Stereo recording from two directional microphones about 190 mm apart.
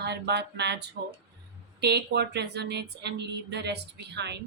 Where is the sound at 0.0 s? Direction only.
60° right (ahead or behind).